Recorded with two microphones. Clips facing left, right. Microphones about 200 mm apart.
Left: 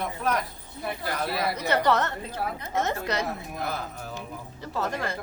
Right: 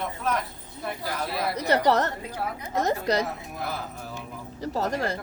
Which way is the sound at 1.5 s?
35° right (ahead or behind).